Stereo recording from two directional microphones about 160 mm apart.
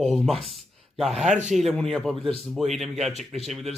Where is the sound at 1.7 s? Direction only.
Centre (ahead or behind).